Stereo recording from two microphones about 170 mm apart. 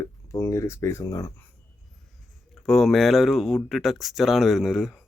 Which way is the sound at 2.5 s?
Centre (ahead or behind).